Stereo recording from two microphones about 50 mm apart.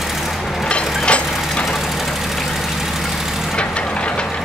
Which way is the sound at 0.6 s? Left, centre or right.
Left.